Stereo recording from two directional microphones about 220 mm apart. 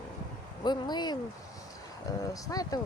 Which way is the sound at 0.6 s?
20° left (ahead or behind).